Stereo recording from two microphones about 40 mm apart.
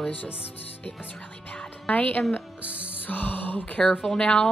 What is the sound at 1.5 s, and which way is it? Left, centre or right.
Music, left.